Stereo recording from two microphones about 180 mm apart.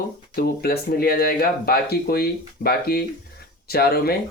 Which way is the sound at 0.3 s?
60° left (ahead or behind).